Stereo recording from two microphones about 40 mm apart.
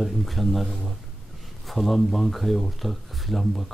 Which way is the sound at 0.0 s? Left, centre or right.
Centre.